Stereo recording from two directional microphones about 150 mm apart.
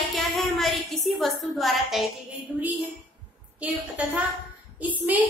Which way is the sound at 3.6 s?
10° right (ahead or behind).